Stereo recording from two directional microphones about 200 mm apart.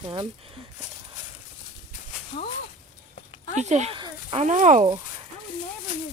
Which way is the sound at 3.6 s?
35° right (ahead or behind).